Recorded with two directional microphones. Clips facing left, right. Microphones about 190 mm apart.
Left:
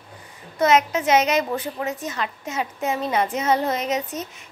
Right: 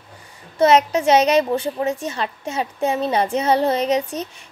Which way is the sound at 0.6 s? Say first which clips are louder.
Right 4 dB; 35° right (ahead or behind).